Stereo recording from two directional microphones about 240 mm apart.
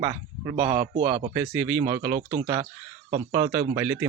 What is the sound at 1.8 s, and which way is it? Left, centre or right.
A man's voice, right.